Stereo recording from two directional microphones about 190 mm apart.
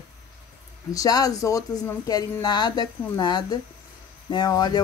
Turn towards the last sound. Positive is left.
turn(degrees=20)  # may be behind; listen again after turning